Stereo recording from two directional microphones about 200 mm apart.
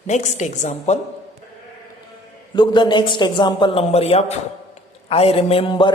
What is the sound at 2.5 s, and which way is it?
A man's voice, 20° left (ahead or behind).